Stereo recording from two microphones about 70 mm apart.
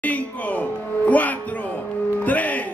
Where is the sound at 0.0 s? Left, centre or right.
Left.